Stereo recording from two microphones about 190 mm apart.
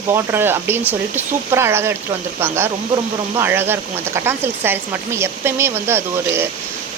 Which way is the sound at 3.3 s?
10° right (ahead or behind).